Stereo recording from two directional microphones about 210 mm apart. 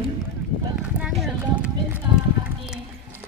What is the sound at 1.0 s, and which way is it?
Speech, 5° right (ahead or behind).